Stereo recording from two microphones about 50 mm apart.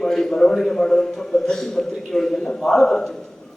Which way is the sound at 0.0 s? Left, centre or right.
Centre.